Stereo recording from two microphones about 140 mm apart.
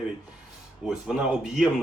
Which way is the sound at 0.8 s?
5° right (ahead or behind).